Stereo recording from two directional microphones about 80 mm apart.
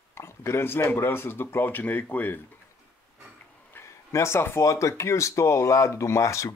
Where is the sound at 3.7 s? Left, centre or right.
Left.